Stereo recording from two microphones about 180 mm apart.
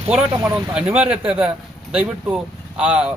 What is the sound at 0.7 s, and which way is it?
Speech, 5° right (ahead or behind).